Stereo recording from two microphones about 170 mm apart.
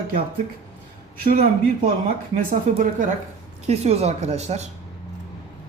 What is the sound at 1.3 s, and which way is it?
A man's voice, 55° right (ahead or behind).